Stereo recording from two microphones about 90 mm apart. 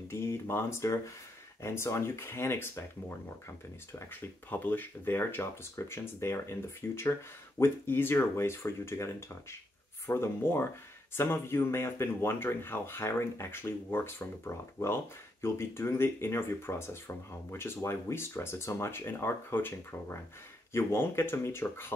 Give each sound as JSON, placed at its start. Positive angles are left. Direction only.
{"t": 0.1, "sound": "speech", "side_deg": 30}